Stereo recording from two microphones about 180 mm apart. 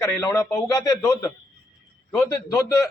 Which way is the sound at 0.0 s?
15° left (ahead or behind).